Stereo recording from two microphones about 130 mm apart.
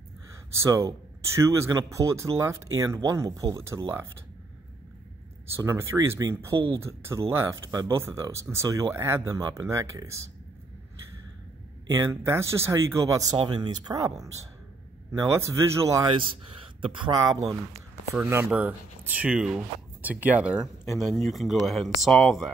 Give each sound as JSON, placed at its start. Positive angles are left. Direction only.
{"t": 0.5, "sound": "speech", "side_deg": -25}
{"t": 5.6, "sound": "speech", "side_deg": -25}
{"t": 11.9, "sound": "speech", "side_deg": -20}
{"t": 15.1, "sound": "speech", "side_deg": -20}
{"t": 16.1, "sound": "speech", "side_deg": -40}
{"t": 18.3, "sound": "speech", "side_deg": -15}